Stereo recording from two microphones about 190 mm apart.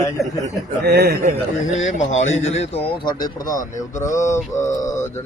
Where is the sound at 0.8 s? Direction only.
55° right (ahead or behind).